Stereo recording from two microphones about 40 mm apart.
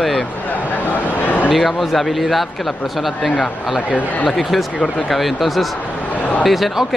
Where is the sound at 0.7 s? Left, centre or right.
Left.